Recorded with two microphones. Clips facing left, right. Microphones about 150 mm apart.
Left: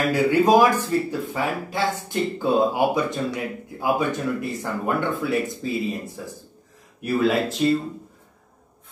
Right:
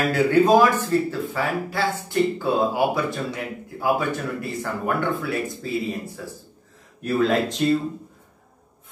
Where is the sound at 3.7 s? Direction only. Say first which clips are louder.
Even; 15° left (ahead or behind).